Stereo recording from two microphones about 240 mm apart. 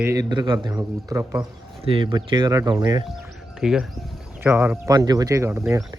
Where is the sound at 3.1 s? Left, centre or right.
Centre.